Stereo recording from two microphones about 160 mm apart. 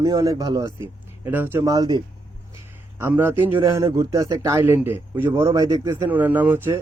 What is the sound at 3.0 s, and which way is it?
Speech, 15° right (ahead or behind).